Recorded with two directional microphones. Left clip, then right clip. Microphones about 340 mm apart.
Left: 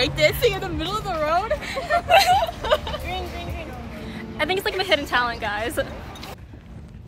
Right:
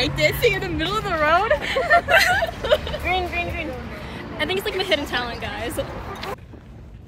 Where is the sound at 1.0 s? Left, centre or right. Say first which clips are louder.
Right 4 dB; centre.